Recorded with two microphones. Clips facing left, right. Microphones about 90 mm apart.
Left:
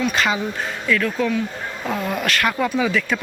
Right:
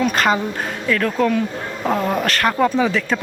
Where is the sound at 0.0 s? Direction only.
45° right (ahead or behind).